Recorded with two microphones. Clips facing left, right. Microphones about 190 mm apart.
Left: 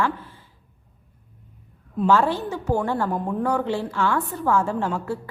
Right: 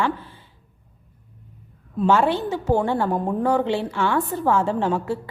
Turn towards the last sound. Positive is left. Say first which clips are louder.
# right 3 dB
turn(degrees=-25)  # may be behind; listen again after turning